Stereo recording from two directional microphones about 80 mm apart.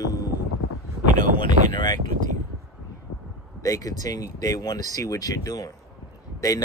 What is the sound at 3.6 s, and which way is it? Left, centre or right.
Speech, left.